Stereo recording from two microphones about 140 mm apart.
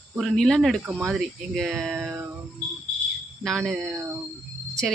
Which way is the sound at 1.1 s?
Centre (ahead or behind).